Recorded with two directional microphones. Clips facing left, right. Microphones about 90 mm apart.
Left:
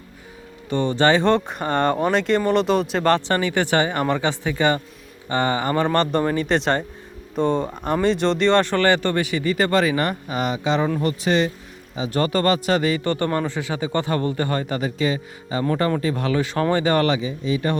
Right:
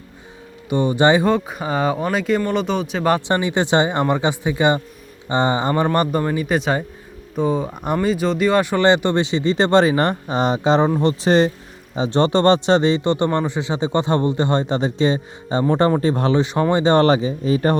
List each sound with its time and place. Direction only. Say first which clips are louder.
0.7 s a man's voice: right 3 dB; 15° right (ahead or behind)
1.3 s speech: even; 5° right (ahead or behind)
3.1 s a man's voice: right 2 dB; 15° right (ahead or behind); by 16.4 s 30° right (ahead or behind)
16.4 s a man's voice: right 3 dB; 20° right (ahead or behind); by 17.7 s 40° right (ahead or behind)